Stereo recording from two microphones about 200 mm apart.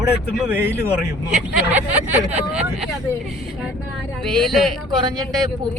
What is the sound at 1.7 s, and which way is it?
Speech, 5° right (ahead or behind).